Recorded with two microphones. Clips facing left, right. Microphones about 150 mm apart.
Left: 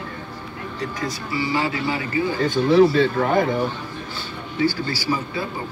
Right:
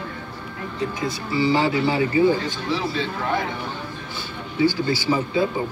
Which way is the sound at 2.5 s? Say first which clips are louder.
Left 11 dB; 55° left (ahead or behind).